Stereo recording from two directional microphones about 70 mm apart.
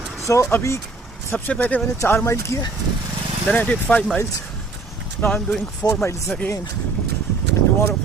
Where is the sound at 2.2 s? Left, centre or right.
Left.